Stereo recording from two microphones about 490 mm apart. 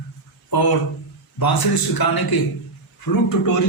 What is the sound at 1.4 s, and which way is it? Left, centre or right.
A man's voice, left.